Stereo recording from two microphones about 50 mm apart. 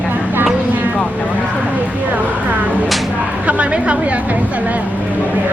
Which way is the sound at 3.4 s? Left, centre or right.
Right.